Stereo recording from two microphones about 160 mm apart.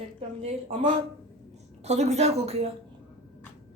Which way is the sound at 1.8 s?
45° right (ahead or behind).